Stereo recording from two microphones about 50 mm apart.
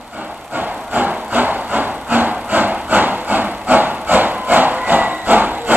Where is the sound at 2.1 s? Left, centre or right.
Right.